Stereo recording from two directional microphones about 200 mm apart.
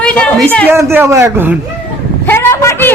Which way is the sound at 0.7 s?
10° right (ahead or behind).